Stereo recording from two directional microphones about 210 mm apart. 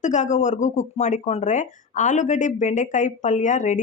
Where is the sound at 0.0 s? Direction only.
35° left (ahead or behind).